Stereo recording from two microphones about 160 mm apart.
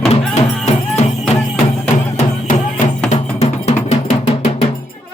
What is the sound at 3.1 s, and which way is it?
Music, 40° left (ahead or behind).